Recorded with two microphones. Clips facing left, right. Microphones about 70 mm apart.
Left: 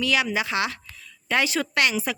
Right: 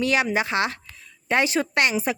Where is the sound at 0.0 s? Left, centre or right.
Right.